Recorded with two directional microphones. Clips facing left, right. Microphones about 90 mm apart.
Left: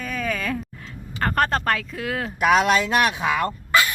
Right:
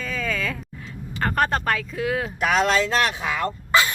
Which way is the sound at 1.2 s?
Centre (ahead or behind).